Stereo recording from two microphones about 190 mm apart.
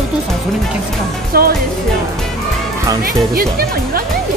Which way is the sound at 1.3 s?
55° right (ahead or behind).